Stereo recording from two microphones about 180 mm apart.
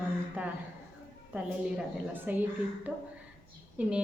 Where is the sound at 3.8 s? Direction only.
5° right (ahead or behind).